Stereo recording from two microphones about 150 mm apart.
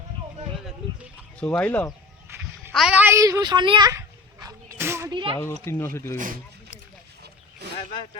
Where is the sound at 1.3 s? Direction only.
5° left (ahead or behind).